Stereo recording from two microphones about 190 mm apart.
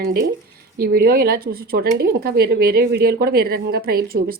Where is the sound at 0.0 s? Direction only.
55° right (ahead or behind).